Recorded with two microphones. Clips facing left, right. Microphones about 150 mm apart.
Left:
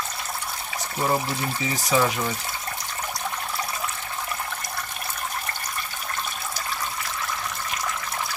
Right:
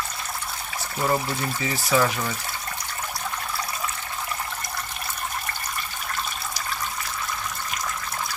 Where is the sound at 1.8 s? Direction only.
15° left (ahead or behind).